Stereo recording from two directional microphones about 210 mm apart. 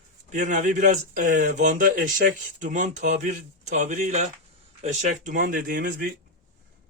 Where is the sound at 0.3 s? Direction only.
35° right (ahead or behind).